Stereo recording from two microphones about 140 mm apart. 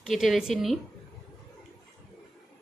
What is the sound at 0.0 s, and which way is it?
Speech, centre (ahead or behind).